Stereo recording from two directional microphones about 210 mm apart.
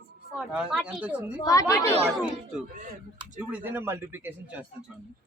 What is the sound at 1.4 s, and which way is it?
Speech, 15° left (ahead or behind).